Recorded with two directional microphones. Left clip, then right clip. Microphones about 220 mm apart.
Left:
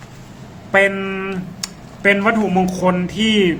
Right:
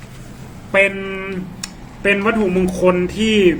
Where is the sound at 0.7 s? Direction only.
40° left (ahead or behind).